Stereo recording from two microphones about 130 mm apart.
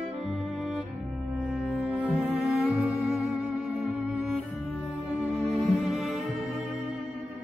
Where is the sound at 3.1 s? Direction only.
10° right (ahead or behind).